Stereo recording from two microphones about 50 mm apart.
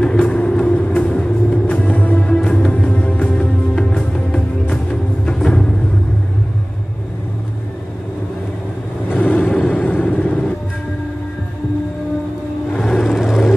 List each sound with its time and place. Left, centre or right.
0.0 s music: centre; by 2.2 s left
2.2 s music: centre
2.7 s music: left
3.7 s music: centre
9.1 s vehicle: left
12.8 s vehicle: centre